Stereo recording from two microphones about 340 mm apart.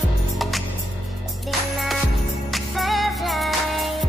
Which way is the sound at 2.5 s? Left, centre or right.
Centre.